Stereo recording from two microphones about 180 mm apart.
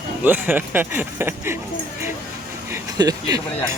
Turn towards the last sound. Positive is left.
turn(degrees=-20)  # may be behind; listen again after turning